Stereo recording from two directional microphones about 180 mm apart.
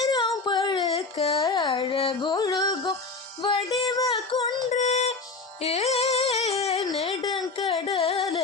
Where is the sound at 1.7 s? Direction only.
30° left (ahead or behind).